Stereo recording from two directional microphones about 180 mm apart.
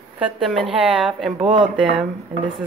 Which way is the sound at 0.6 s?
30° right (ahead or behind).